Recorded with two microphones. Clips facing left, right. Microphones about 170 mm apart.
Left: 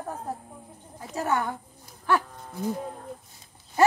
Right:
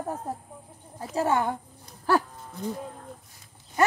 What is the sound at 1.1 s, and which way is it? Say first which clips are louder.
Speech: right 3 dB; 25° right (ahead or behind).